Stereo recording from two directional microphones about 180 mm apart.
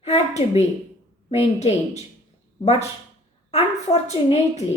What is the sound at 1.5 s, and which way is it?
Speech, 35° left (ahead or behind).